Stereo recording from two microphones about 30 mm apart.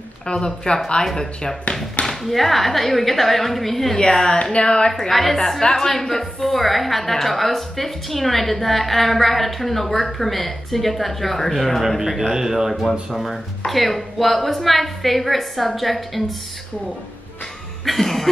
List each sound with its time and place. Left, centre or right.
0.3 s speech: left
1.1 s cough: centre
2.2 s a woman's voice: centre
4.4 s speech: left
5.1 s a woman's voice: centre
5.6 s speech: left
5.9 s a woman's voice: centre
12.2 s speech: centre
13.1 s a woman's voice: centre
17.8 s cough: centre